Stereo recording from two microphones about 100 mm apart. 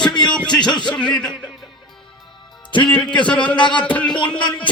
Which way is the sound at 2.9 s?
10° left (ahead or behind).